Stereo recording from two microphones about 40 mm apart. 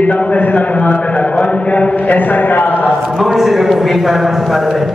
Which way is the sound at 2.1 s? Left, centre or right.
Left.